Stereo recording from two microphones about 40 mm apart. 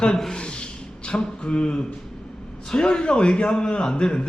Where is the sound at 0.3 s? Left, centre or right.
Left.